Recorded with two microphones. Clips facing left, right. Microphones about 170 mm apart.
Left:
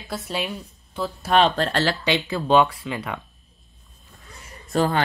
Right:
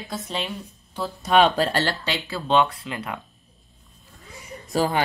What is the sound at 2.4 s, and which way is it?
Speech, 5° left (ahead or behind).